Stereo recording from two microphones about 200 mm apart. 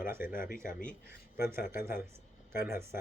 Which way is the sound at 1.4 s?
10° right (ahead or behind).